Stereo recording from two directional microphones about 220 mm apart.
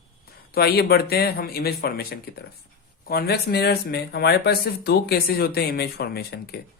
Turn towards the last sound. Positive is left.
turn(degrees=45)  # may be behind; listen again after turning